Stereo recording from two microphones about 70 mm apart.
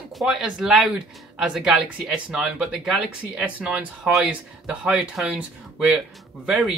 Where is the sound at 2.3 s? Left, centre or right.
Centre.